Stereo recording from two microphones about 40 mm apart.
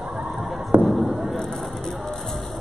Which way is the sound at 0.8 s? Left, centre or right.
Centre.